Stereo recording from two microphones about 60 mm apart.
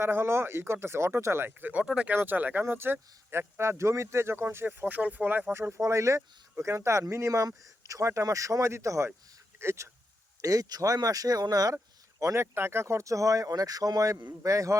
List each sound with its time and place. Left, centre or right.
0.0 s speech: right
1.5 s speech: right
1.8 s speech: centre
2.1 s speech: right
5.5 s speech: right
5.8 s speech: right
10.4 s speech: right
12.2 s speech: right
14.4 s speech: right